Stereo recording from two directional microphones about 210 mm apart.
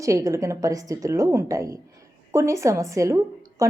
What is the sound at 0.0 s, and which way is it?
A woman's voice, 15° right (ahead or behind).